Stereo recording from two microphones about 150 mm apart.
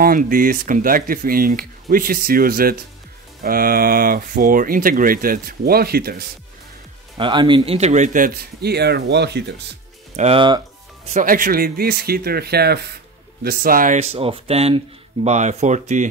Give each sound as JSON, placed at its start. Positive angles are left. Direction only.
{"t": 0.0, "sound": "speech", "side_deg": -70}
{"t": 7.2, "sound": "a man's voice", "side_deg": -35}
{"t": 10.1, "sound": "speech", "side_deg": -45}
{"t": 11.1, "sound": "speech", "side_deg": -65}
{"t": 13.4, "sound": "speech", "side_deg": -75}